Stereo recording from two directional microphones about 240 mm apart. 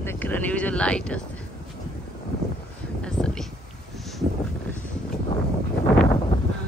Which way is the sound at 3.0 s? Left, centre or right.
Centre.